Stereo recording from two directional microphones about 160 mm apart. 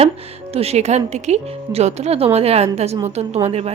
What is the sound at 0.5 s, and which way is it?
A woman's voice, 40° right (ahead or behind).